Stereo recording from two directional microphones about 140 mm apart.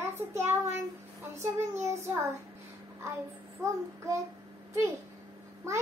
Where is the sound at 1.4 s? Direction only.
20° right (ahead or behind).